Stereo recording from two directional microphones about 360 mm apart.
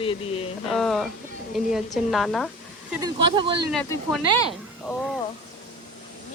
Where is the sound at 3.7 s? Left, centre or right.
Centre.